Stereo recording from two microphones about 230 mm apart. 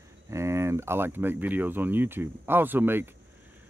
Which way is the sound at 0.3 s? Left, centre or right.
Centre.